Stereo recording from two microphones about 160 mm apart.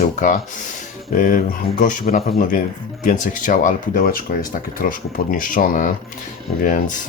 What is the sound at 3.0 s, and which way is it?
Speech, 55° left (ahead or behind).